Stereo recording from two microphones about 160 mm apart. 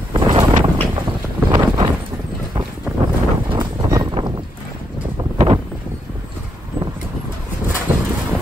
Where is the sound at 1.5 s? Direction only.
30° right (ahead or behind).